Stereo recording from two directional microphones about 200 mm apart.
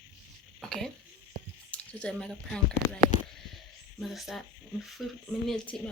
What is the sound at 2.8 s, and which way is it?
Speech, 55° right (ahead or behind).